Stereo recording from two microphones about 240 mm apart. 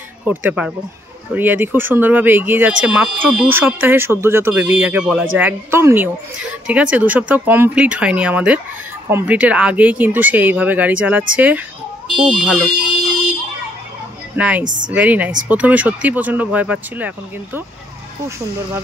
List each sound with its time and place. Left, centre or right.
0.5 s speech: centre
14.3 s a woman's voice: centre
14.6 s a woman's voice: right
15.0 s speech: centre